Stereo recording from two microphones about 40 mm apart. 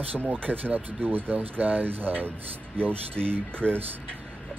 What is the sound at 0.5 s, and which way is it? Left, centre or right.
Speech, right.